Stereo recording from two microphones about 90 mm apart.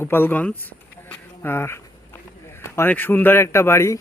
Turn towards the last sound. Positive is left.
turn(degrees=30)  # may be behind; listen again after turning